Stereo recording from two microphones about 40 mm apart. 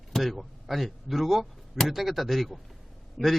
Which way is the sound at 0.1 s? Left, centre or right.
Centre.